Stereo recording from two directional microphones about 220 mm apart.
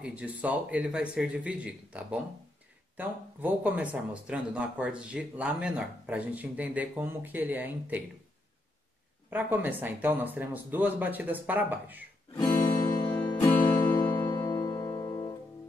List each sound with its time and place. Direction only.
0.0 s speech: 5° right (ahead or behind)
9.3 s speech: 10° right (ahead or behind)
12.4 s guitar: 15° left (ahead or behind)
13.1 s music: 5° left (ahead or behind)
13.9 s music: 20° left (ahead or behind)